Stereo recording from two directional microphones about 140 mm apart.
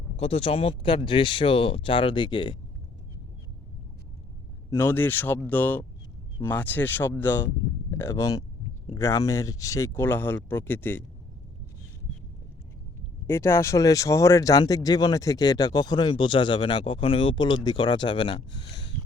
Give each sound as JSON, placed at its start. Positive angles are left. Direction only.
{"t": 0.2, "sound": "speech", "side_deg": 45}
{"t": 4.7, "sound": "speech", "side_deg": 15}
{"t": 13.2, "sound": "speech", "side_deg": 20}